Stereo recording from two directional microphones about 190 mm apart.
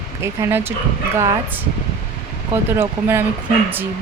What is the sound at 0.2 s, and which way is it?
Speech, 10° right (ahead or behind).